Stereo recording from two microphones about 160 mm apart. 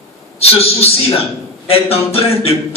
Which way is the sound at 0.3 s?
40° left (ahead or behind).